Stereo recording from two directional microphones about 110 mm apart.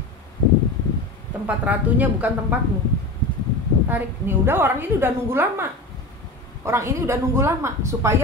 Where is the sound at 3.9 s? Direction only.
20° right (ahead or behind).